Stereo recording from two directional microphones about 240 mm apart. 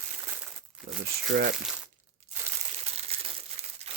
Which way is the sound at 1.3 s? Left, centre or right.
Right.